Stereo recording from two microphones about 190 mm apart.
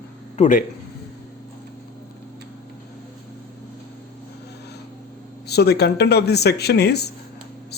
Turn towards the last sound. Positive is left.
turn(degrees=60)  # may be behind; listen again after turning